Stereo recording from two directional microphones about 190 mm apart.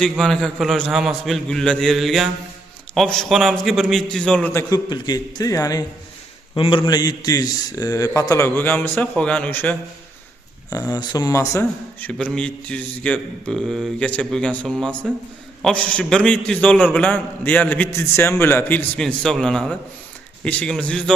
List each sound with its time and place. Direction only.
0.0 s a man's voice: centre (ahead or behind)
4.7 s a man's voice: 20° left (ahead or behind); by 21.0 s 5° left (ahead or behind)